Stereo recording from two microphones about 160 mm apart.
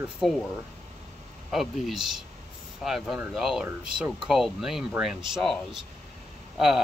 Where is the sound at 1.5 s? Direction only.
Centre (ahead or behind).